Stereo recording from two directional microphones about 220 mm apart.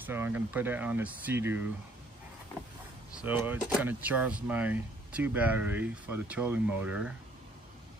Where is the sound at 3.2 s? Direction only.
5° right (ahead or behind).